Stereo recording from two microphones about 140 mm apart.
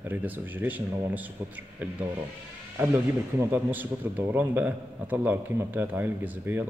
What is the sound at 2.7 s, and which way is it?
Speech, 15° right (ahead or behind).